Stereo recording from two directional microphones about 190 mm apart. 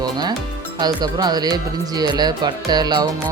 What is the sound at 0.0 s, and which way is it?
Speech, 20° right (ahead or behind).